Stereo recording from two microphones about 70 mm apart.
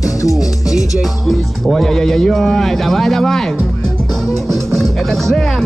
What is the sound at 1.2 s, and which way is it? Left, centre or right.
Speech, centre.